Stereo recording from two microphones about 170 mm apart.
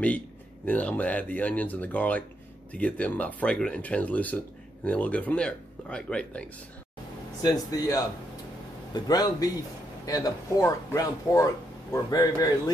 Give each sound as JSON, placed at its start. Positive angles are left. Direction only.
{"t": 0.7, "sound": "speech", "side_deg": 10}
{"t": 7.4, "sound": "speech", "side_deg": 20}